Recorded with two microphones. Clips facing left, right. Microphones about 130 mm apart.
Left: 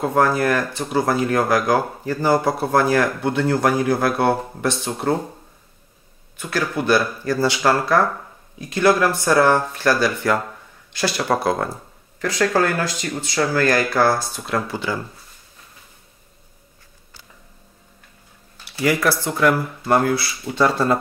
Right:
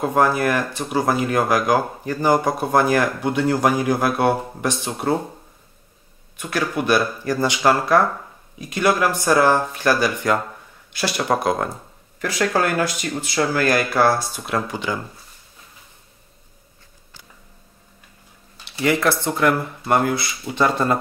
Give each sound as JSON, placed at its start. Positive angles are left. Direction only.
{"t": 0.0, "sound": "speech", "side_deg": -15}
{"t": 6.3, "sound": "speech", "side_deg": -15}
{"t": 18.6, "sound": "speech", "side_deg": -25}